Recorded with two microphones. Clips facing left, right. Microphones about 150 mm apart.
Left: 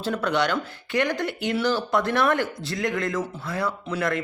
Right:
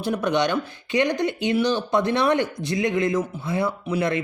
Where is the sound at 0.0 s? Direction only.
20° right (ahead or behind).